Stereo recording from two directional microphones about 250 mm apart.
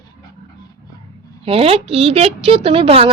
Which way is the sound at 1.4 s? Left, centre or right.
Right.